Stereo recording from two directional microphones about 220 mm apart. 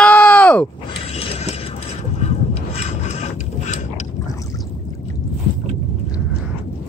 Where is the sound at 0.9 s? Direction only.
25° left (ahead or behind).